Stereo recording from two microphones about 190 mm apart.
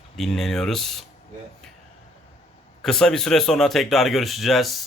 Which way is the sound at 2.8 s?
5° left (ahead or behind).